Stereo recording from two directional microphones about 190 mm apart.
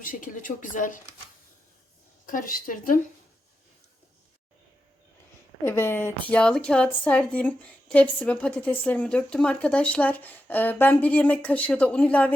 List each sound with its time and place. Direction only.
0.0 s speech: 45° left (ahead or behind)
2.2 s speech: 45° left (ahead or behind)
5.6 s a woman's voice: 10° left (ahead or behind)